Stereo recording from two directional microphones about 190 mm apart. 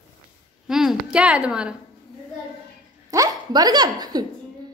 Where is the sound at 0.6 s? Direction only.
Centre (ahead or behind).